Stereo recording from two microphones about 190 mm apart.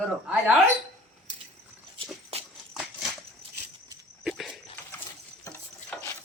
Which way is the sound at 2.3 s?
30° right (ahead or behind).